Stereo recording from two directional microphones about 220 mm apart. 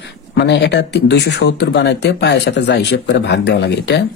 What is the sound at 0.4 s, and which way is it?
Speech, 50° left (ahead or behind).